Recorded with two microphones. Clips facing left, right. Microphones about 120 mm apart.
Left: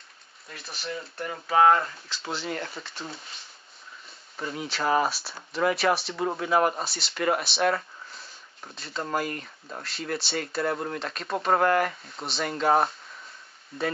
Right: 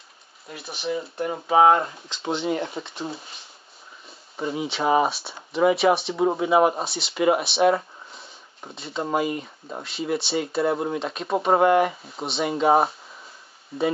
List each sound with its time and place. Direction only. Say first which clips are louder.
0.6 s speech: right 7 dB; centre (ahead or behind)
1.1 s speech: right 4 dB; 20° right (ahead or behind)
2.8 s speech: right 7 dB; 30° right (ahead or behind)
4.6 s speech: right 4 dB; centre (ahead or behind)
8.1 s a sound: right 2 dB; centre (ahead or behind)
8.7 s speech: right 5 dB; centre (ahead or behind)